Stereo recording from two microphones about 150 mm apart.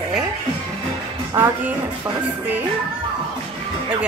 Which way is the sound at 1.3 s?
15° right (ahead or behind).